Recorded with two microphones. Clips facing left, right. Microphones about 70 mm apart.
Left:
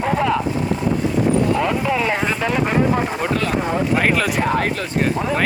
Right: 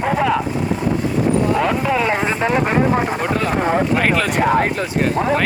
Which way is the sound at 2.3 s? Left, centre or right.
Right.